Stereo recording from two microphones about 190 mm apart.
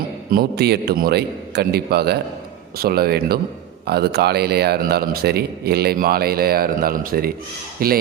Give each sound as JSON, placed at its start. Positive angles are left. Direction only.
{"t": 0.3, "sound": "a man's voice", "side_deg": -55}